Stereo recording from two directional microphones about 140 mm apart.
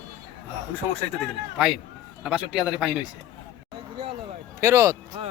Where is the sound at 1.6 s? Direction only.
5° right (ahead or behind).